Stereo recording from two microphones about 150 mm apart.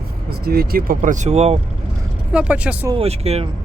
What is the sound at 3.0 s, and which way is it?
Speech, 45° right (ahead or behind).